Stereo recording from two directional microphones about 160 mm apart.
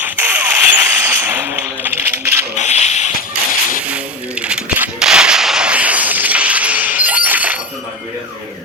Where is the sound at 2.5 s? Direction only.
45° left (ahead or behind).